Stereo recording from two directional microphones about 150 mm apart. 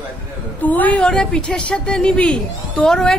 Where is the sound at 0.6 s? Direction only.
10° left (ahead or behind).